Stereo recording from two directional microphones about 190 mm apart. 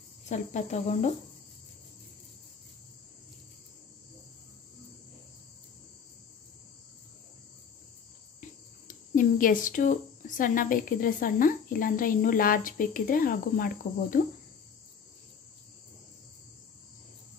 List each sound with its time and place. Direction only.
0.3 s cricket: 40° left (ahead or behind)
8.4 s speech: 45° left (ahead or behind)
14.2 s cricket: 45° left (ahead or behind)